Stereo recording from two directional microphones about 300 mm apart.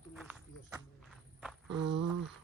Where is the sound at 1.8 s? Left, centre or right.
Right.